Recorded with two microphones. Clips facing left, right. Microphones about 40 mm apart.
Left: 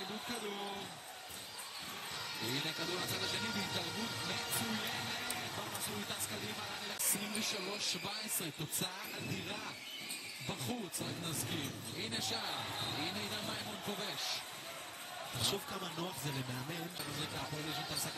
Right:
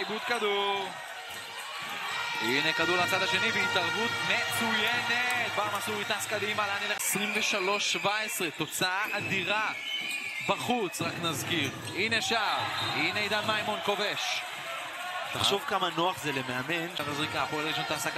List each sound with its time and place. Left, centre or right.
0.1 s speech: right
2.4 s speech: right